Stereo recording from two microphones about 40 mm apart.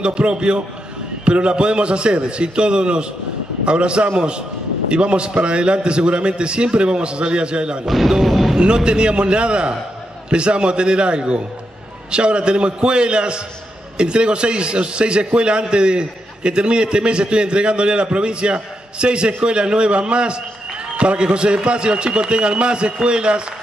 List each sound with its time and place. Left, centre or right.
0.0 s a man's voice: right
7.8 s speech: centre
8.5 s a man's voice: right